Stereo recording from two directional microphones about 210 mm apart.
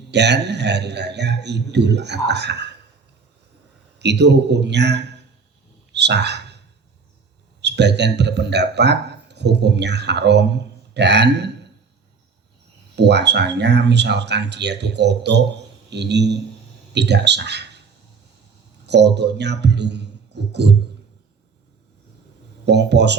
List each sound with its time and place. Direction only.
0.1 s a man's voice: 55° right (ahead or behind)
3.9 s speech: 55° right (ahead or behind)
5.9 s a sound: 55° right (ahead or behind)
7.6 s a man's voice: 55° right (ahead or behind)
13.0 s a man's voice: 55° right (ahead or behind)
18.9 s speech: 55° right (ahead or behind)
22.6 s speech: 55° right (ahead or behind)